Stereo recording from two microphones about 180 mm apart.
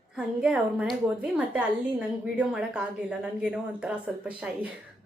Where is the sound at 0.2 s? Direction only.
5° right (ahead or behind).